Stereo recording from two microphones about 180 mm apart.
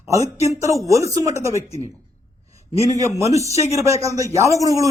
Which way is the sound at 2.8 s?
20° right (ahead or behind).